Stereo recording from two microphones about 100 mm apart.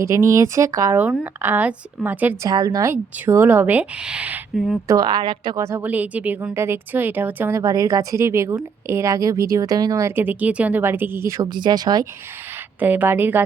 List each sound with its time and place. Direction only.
0.0 s speech: 30° right (ahead or behind)
1.2 s speech: 20° right (ahead or behind)
2.4 s speech: 40° right (ahead or behind)
2.9 s speech: 25° right (ahead or behind)
4.5 s speech: centre (ahead or behind)
4.9 s speech: 40° right (ahead or behind)
5.5 s speech: 30° right (ahead or behind)
5.8 s speech: 15° right (ahead or behind)
7.5 s speech: 40° right (ahead or behind); by 11.3 s 20° right (ahead or behind)
11.3 s speech: 40° right (ahead or behind)
12.8 s speech: 15° right (ahead or behind)